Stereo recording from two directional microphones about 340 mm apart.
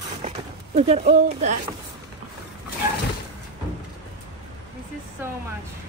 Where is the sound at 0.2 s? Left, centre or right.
Centre.